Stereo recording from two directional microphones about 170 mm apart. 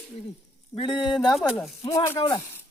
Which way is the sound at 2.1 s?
30° left (ahead or behind).